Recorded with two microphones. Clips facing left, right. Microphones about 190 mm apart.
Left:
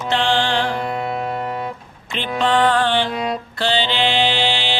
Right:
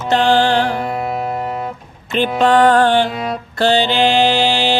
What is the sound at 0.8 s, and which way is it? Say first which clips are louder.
Music: right 2 dB; 5° right (ahead or behind).